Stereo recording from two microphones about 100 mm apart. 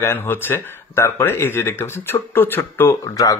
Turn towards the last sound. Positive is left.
turn(degrees=35)  # may be behind; listen again after turning